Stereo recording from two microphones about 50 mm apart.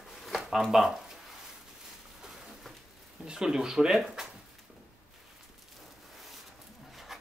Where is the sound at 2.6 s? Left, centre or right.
Centre.